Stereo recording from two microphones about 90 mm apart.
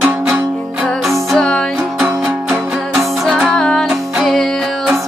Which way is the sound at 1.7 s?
15° right (ahead or behind).